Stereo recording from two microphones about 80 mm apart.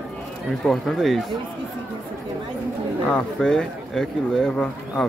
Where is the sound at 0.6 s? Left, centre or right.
Centre.